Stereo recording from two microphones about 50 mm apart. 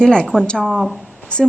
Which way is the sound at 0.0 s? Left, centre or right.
Centre.